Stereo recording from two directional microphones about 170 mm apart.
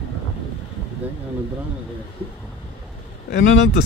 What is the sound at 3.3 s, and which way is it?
Speech, 90° left.